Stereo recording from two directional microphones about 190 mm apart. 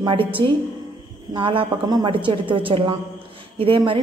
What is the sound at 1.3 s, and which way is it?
A woman's voice, 25° right (ahead or behind).